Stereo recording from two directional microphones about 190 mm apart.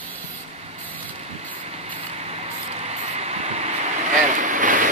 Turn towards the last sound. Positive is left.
turn(degrees=-45)  # may be behind; listen again after turning